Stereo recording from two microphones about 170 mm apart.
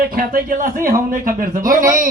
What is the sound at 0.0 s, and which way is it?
A man's voice, 55° right (ahead or behind).